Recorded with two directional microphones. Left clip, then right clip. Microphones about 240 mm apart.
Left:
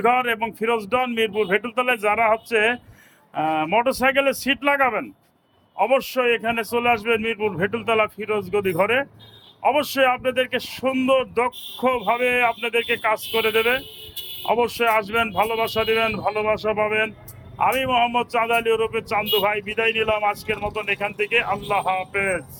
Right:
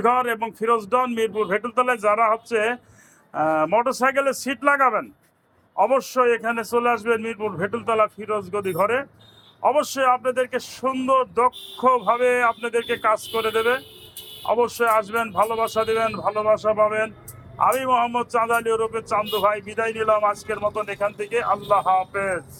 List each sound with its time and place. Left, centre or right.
0.0 s speech: centre